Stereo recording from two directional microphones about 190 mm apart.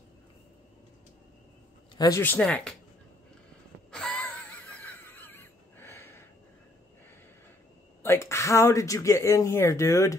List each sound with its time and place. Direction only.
2.0 s speech: 15° left (ahead or behind)
3.9 s wheeze: 5° left (ahead or behind)
8.0 s speech: 15° left (ahead or behind)